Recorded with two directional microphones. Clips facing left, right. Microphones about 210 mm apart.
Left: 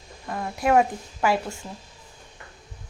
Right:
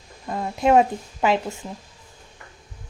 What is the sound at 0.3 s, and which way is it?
A woman's voice, 20° right (ahead or behind).